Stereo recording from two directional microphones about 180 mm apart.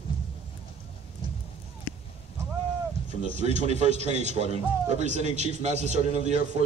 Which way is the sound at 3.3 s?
40° right (ahead or behind).